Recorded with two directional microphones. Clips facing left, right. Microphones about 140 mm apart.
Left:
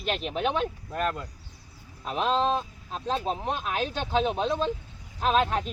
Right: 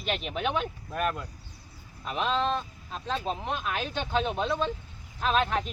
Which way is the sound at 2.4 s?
40° left (ahead or behind).